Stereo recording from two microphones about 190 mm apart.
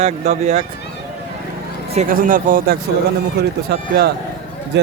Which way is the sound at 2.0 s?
45° right (ahead or behind).